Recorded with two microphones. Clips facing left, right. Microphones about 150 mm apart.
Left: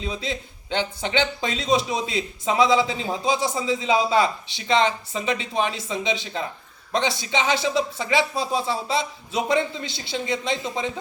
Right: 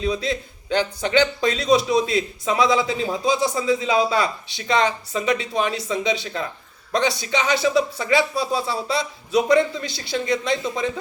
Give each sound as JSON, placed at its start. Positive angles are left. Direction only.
{"t": 0.0, "sound": "speech", "side_deg": 25}